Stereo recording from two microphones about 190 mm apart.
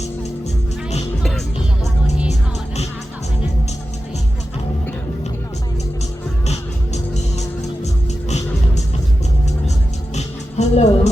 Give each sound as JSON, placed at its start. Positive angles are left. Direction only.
{"t": 6.5, "sound": "music", "side_deg": 35}
{"t": 10.2, "sound": "music", "side_deg": 35}